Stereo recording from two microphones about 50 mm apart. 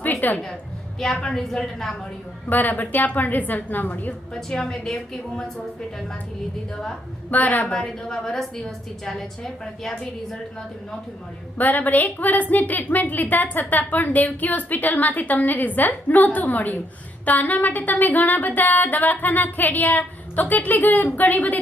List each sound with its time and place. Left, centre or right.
0.0 s a sound: left
0.9 s a woman's voice: centre
2.5 s a woman's voice: left
4.4 s a woman's voice: centre
7.3 s a woman's voice: left
7.7 s a woman's voice: centre
11.5 s a woman's voice: left